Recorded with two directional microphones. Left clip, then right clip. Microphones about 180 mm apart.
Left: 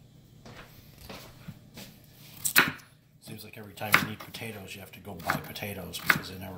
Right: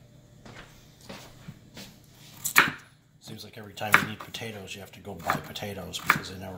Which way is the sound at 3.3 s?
20° right (ahead or behind).